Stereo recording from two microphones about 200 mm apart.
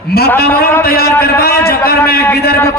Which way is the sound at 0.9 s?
50° left (ahead or behind).